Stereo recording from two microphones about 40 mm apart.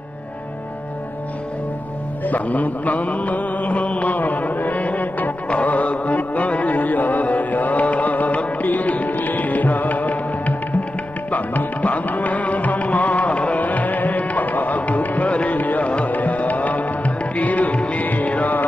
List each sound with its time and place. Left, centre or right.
2.2 s mantra: left
5.5 s music: left